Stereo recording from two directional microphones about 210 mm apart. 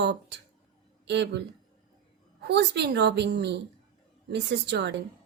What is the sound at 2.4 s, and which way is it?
Speech, 55° right (ahead or behind).